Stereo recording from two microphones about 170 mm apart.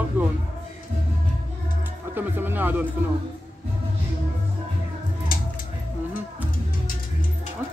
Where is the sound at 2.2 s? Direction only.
10° right (ahead or behind).